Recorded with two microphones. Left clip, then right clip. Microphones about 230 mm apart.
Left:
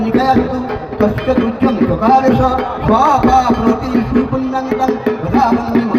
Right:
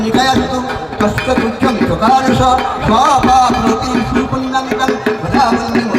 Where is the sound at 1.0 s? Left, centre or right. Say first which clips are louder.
Even; right.